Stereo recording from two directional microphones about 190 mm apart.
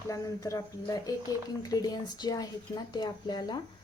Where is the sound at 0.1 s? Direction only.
15° left (ahead or behind).